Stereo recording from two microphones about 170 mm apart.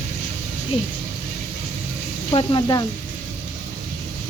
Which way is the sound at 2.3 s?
25° left (ahead or behind).